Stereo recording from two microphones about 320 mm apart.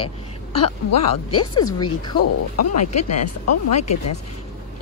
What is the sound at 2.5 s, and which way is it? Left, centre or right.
Speech, left.